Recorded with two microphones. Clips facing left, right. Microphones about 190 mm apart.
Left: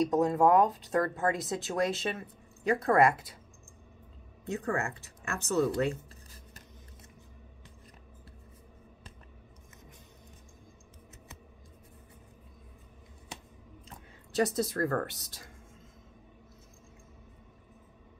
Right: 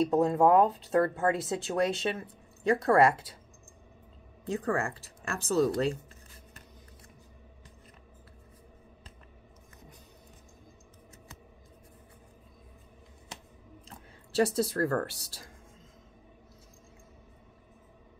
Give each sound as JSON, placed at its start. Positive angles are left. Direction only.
{"t": 0.0, "sound": "speech", "side_deg": -30}
{"t": 4.5, "sound": "speech", "side_deg": -30}
{"t": 13.8, "sound": "a woman's voice", "side_deg": -30}